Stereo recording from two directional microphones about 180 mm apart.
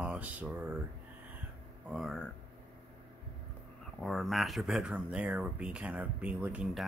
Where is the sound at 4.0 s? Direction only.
Centre (ahead or behind).